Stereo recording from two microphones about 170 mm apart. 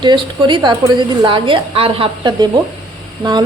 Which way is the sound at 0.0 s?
25° right (ahead or behind).